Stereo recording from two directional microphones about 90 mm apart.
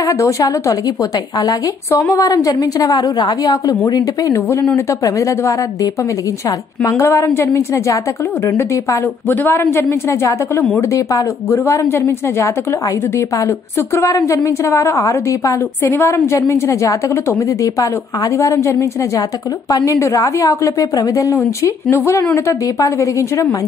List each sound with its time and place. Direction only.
0.0 s a woman's voice: 40° left (ahead or behind)
6.8 s a woman's voice: 35° left (ahead or behind)
9.4 s speech: 25° left (ahead or behind)
13.7 s a woman's voice: 30° left (ahead or behind)